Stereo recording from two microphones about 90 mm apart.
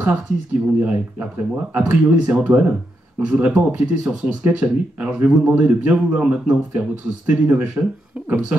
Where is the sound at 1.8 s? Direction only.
20° right (ahead or behind).